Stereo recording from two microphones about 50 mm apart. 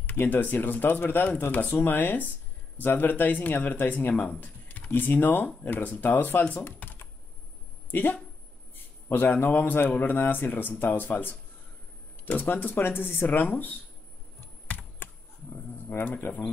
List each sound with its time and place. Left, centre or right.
0.0 s speech: left
6.5 s computer keyboard: left
8.7 s a sound: left
9.3 s speech: left
15.9 s speech: left